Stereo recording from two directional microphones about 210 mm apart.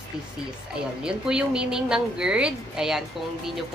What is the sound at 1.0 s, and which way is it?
A woman's voice, 5° right (ahead or behind).